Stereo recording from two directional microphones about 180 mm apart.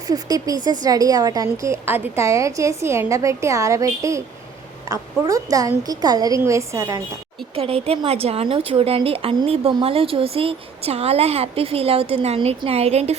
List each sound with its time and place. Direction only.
0.1 s a woman's voice: 20° right (ahead or behind)
7.5 s speech: 30° right (ahead or behind)